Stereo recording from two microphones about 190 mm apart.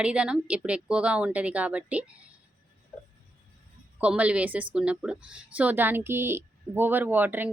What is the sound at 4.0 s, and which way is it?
A woman's voice, 5° right (ahead or behind).